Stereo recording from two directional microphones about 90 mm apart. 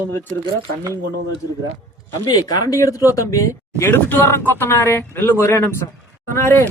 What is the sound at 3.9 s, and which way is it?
Speech, 20° left (ahead or behind).